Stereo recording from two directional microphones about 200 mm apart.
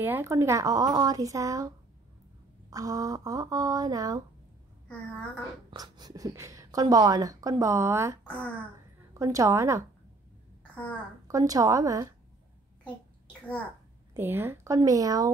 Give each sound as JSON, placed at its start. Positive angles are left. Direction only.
{"t": 0.0, "sound": "speech", "side_deg": -10}
{"t": 2.7, "sound": "speech", "side_deg": -15}
{"t": 5.7, "sound": "speech", "side_deg": -20}
{"t": 8.3, "sound": "a child's voice", "side_deg": 5}
{"t": 9.2, "sound": "speech", "side_deg": -15}
{"t": 10.7, "sound": "a sound", "side_deg": 5}
{"t": 11.2, "sound": "speech", "side_deg": -15}
{"t": 14.1, "sound": "speech", "side_deg": -10}